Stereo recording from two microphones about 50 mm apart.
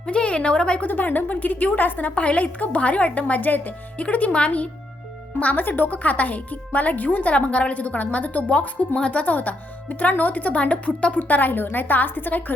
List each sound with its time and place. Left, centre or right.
0.0 s a woman's voice: left
0.9 s a woman's voice: left
7.3 s a woman's voice: left